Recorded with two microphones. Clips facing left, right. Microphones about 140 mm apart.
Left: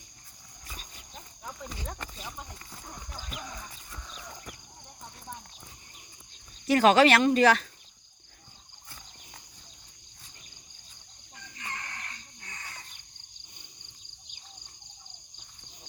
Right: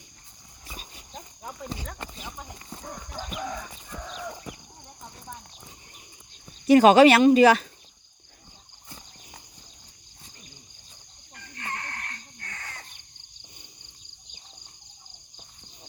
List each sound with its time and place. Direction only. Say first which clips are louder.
0.7 s wild animals: right 4 dB; 10° right (ahead or behind)
3.4 s horse: right 9 dB; 80° right
6.7 s speech: right 6 dB; 15° right (ahead or behind)
11.3 s a sound: right 5 dB; 60° right (ahead or behind)